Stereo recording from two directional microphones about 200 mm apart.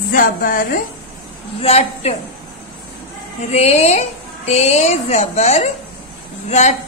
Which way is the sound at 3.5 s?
35° left (ahead or behind).